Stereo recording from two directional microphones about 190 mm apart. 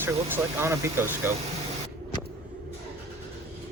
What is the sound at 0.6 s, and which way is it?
Speech, 15° right (ahead or behind).